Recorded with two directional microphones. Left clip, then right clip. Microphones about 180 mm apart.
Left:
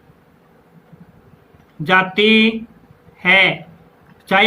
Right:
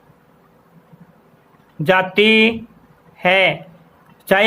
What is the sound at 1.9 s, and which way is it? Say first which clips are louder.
Speech: even; 50° right (ahead or behind).